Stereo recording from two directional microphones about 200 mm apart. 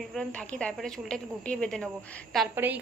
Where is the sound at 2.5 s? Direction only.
10° right (ahead or behind).